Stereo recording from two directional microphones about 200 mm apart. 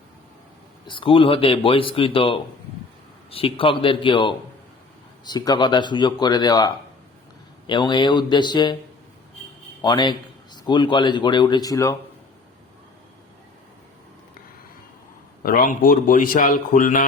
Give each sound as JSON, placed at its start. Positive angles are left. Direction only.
{"t": 0.9, "sound": "a man's voice", "side_deg": 25}
{"t": 9.8, "sound": "a man's voice", "side_deg": 20}
{"t": 15.4, "sound": "speech", "side_deg": 45}